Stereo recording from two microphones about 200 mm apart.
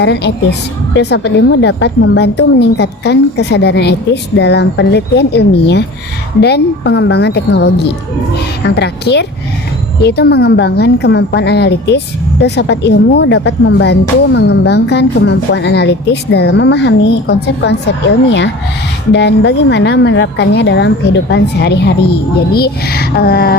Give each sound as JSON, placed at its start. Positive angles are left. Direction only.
{"t": 0.0, "sound": "a woman's voice", "side_deg": 60}